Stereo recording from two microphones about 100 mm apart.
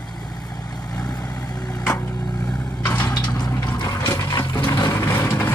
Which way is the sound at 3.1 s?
45° left (ahead or behind).